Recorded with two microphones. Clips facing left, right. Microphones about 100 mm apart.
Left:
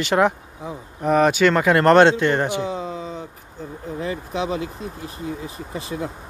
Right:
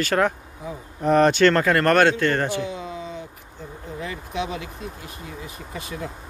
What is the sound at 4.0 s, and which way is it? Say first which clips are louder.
Speech: left 3 dB; 30° left (ahead or behind).